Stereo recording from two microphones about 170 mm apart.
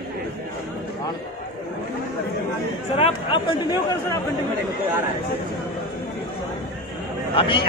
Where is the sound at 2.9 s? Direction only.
35° left (ahead or behind).